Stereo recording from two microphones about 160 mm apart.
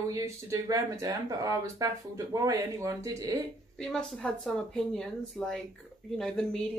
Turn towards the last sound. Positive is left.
turn(degrees=5)  # may be behind; listen again after turning